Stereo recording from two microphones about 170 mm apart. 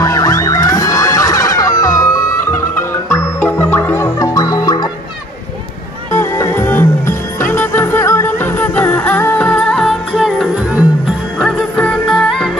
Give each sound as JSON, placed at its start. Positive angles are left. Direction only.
{"t": 0.0, "sound": "music", "side_deg": 20}
{"t": 6.1, "sound": "music", "side_deg": 15}